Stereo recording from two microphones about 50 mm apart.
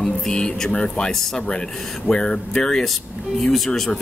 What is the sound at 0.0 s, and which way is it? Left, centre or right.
Speech, centre.